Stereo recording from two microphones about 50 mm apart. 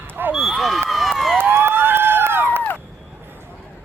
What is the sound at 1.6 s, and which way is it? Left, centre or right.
Run, right.